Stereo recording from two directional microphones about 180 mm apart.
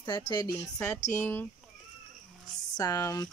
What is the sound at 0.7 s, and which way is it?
Speech, 10° left (ahead or behind).